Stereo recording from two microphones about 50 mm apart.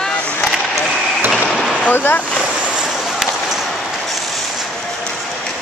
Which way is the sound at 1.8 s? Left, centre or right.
Left.